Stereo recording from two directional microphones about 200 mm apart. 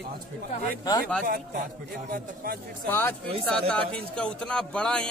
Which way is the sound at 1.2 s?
45° right (ahead or behind).